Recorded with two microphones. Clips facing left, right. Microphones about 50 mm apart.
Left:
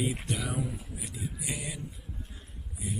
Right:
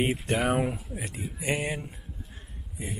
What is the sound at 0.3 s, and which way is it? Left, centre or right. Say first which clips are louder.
Speech: right 8 dB; right.